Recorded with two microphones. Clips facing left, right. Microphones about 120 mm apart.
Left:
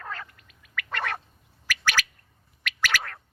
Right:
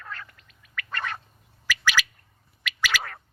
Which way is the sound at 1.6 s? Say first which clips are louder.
Right 2 dB; 55° left (ahead or behind).